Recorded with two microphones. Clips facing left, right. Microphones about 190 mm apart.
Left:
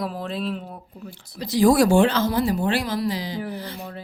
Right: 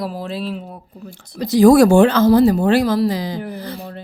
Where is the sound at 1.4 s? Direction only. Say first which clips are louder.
Right 7 dB; 45° right (ahead or behind).